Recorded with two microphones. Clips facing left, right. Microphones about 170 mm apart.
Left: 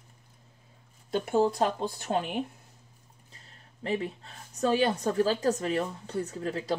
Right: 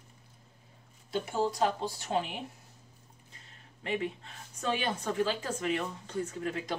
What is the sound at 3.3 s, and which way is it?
Speech, 35° left (ahead or behind).